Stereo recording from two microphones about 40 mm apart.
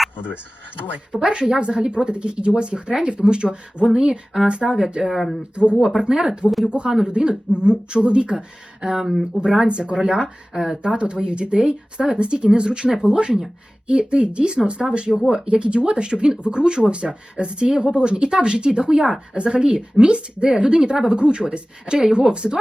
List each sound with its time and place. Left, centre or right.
1.1 s speech: right
5.0 s speech: centre
5.5 s speech: right
5.9 s speech: centre
6.7 s speech: right
8.8 s speech: centre
9.3 s speech: right
10.8 s speech: right